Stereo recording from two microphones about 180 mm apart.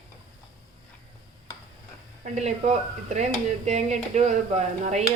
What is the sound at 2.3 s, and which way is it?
Speech, 40° right (ahead or behind).